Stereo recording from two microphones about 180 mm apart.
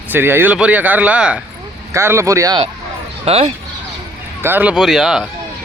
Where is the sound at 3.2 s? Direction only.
35° right (ahead or behind).